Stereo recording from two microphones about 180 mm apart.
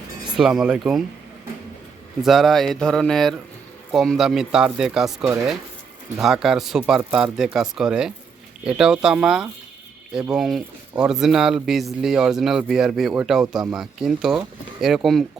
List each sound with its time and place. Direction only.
0.3 s speech: centre (ahead or behind)
2.2 s speech: centre (ahead or behind)